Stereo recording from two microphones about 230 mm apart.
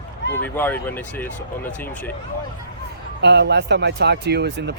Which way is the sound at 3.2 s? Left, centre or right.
Right.